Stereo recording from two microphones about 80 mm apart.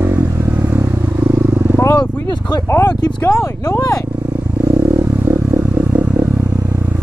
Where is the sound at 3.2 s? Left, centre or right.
Left.